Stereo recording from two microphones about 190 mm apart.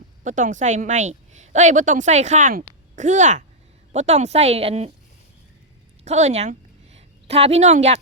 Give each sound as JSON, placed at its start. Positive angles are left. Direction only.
{"t": 0.3, "sound": "a woman's voice", "side_deg": -40}
{"t": 6.1, "sound": "a woman's voice", "side_deg": -35}